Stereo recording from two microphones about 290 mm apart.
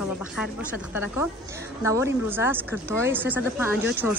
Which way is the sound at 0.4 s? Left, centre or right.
Centre.